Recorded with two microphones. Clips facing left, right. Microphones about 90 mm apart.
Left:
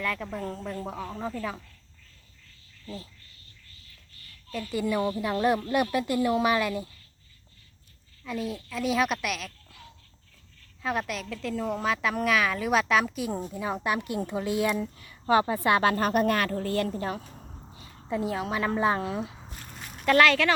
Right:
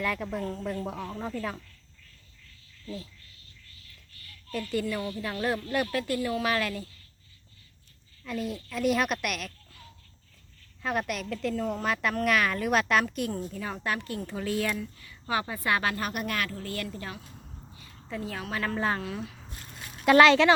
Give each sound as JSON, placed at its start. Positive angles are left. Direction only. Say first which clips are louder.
{"t": 0.0, "sound": "a woman's voice", "louder": "right 1 dB", "side_deg": -5}
{"t": 2.8, "sound": "speech", "louder": "right 1 dB", "side_deg": 30}
{"t": 4.6, "sound": "speech", "louder": "left 4 dB", "side_deg": 10}
{"t": 8.2, "sound": "a woman's voice", "louder": "left 1 dB", "side_deg": 0}
{"t": 10.8, "sound": "a woman's voice", "louder": "even", "side_deg": 0}
{"t": 13.5, "sound": "a woman's voice", "louder": "left 4 dB", "side_deg": 20}
{"t": 17.7, "sound": "a woman's voice", "louder": "left 6 dB", "side_deg": 20}
{"t": 20.1, "sound": "speech", "louder": "right 3 dB", "side_deg": -20}